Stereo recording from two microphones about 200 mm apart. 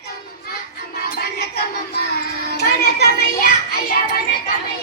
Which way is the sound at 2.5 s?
55° left (ahead or behind).